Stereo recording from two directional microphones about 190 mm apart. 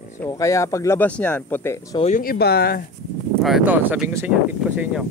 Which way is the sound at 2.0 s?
40° left (ahead or behind).